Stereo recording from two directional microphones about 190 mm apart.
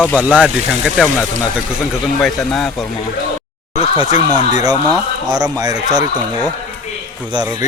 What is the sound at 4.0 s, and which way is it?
Speech, 20° right (ahead or behind).